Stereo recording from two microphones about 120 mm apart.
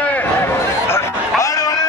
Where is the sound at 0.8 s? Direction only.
25° left (ahead or behind).